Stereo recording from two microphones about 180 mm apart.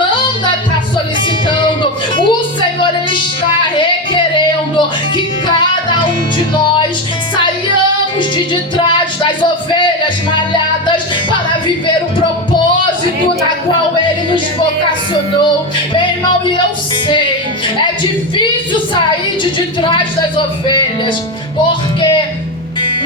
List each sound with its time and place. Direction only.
1.5 s music: 25° left (ahead or behind)
3.8 s music: 25° left (ahead or behind)
9.2 s a sound: 25° left (ahead or behind)
19.5 s music: 25° left (ahead or behind)